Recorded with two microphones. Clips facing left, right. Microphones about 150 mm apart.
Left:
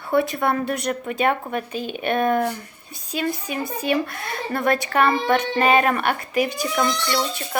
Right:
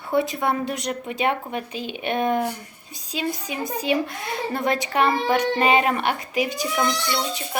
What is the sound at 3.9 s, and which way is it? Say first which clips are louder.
A woman's voice: even; 15° right (ahead or behind).